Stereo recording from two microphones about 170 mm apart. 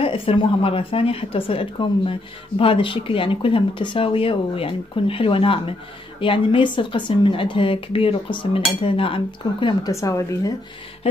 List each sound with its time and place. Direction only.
0.0 s speech: 35° left (ahead or behind)